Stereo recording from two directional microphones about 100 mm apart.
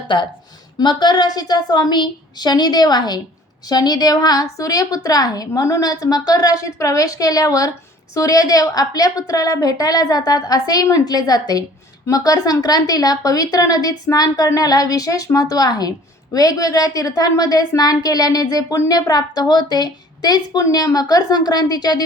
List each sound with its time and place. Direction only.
0.1 s a woman's voice: 55° left (ahead or behind)